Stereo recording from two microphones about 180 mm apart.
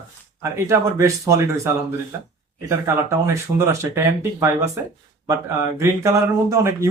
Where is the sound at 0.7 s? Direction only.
15° right (ahead or behind).